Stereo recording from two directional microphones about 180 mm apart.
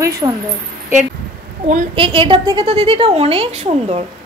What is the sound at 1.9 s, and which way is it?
A woman's voice, 30° right (ahead or behind).